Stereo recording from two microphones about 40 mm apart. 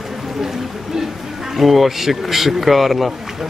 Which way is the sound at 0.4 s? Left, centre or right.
Centre.